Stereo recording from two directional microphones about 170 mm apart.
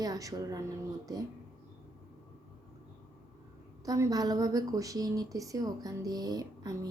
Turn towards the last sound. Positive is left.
turn(degrees=-20)  # may be behind; listen again after turning